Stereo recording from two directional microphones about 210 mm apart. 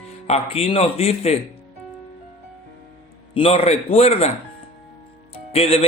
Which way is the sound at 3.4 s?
30° left (ahead or behind).